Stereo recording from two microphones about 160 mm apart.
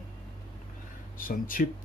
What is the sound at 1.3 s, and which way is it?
Speech, 60° left (ahead or behind).